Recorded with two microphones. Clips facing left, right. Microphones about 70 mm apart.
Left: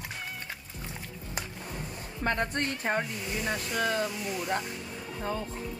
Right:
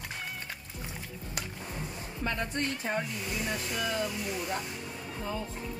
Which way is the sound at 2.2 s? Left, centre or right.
Left.